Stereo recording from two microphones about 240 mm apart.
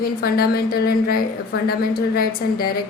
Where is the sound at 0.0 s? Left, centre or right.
Left.